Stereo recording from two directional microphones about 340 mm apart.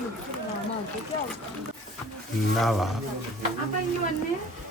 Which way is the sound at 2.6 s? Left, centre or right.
Centre.